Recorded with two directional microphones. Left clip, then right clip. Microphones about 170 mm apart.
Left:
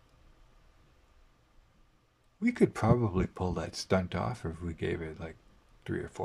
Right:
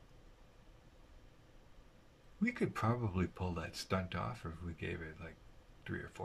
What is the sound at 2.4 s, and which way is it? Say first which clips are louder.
Speech: left 9 dB; 35° left (ahead or behind).